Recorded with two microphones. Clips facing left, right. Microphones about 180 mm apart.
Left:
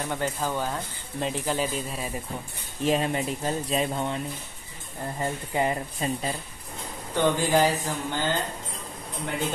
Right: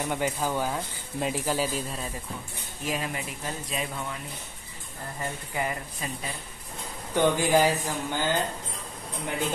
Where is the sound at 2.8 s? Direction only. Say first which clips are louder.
Left 7 dB; 30° left (ahead or behind).